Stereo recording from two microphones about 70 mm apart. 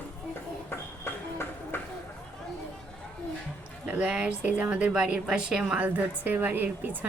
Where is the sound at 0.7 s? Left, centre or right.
Left.